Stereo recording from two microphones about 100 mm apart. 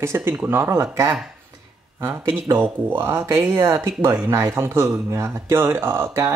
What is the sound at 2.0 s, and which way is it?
Speech, 20° right (ahead or behind).